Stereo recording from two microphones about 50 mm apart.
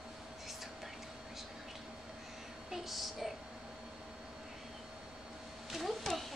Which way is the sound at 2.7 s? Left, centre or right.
Centre.